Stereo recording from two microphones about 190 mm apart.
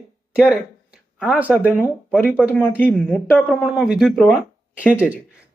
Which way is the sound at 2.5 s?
10° left (ahead or behind).